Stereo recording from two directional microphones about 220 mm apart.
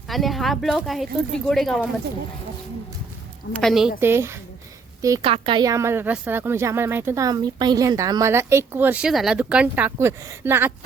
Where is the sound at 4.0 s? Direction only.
10° right (ahead or behind).